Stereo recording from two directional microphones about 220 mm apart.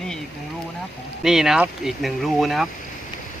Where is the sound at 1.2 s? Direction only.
Centre (ahead or behind).